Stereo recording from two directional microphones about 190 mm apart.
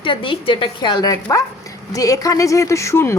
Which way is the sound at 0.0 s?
25° left (ahead or behind).